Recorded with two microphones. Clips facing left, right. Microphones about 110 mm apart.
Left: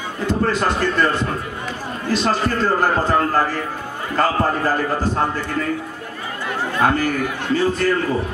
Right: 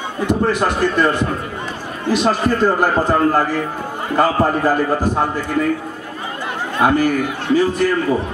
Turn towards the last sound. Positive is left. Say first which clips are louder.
# right 3 dB
turn(degrees=-15)  # may be behind; listen again after turning